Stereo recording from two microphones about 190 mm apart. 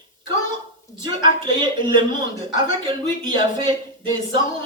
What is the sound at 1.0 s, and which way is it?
Speech, 25° right (ahead or behind).